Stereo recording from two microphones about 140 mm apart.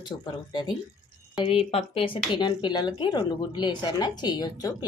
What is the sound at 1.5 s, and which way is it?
Speech, 45° left (ahead or behind).